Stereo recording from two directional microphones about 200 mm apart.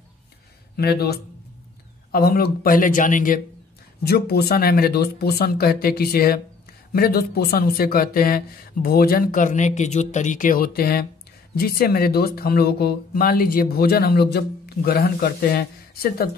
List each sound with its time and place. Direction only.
0.7 s speech: 50° left (ahead or behind)
4.0 s speech: 55° left (ahead or behind)